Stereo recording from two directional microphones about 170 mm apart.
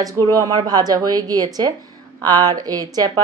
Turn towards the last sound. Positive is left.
turn(degrees=-25)  # may be behind; listen again after turning